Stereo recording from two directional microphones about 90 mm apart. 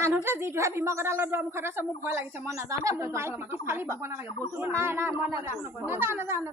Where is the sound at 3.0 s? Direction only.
30° right (ahead or behind).